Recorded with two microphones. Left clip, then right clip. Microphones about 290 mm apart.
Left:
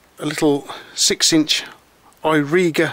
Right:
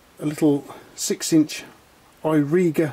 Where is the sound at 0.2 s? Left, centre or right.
Centre.